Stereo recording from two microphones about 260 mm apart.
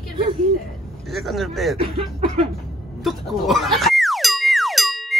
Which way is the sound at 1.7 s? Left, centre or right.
Right.